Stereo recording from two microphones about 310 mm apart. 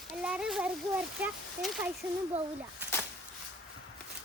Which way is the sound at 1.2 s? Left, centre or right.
Centre.